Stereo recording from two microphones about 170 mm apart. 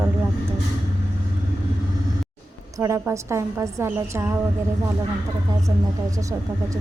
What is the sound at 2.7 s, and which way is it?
A woman's voice, 20° right (ahead or behind).